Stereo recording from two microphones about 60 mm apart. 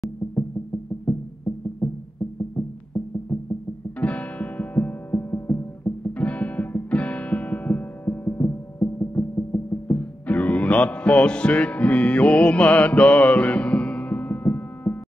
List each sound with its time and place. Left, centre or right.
1.8 s music: left
2.5 s music: left
4.0 s music: left
6.1 s music: left
9.9 s music: left